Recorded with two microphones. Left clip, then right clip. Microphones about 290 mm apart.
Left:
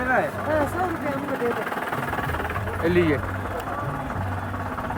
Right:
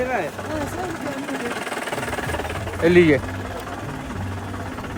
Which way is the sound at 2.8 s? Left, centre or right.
Centre.